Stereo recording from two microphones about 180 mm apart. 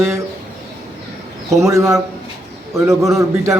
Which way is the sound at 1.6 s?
15° right (ahead or behind).